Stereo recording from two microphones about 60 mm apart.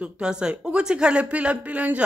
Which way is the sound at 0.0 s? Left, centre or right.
Centre.